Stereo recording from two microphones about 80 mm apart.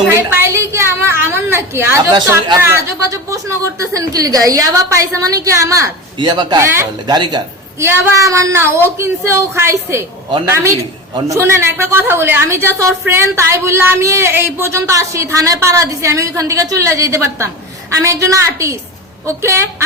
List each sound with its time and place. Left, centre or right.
0.1 s a sound: right
2.6 s a woman's voice: right
6.1 s a man's voice: right
7.8 s a woman's voice: right